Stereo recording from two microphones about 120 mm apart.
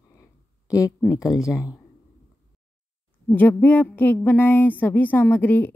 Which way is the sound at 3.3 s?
15° left (ahead or behind).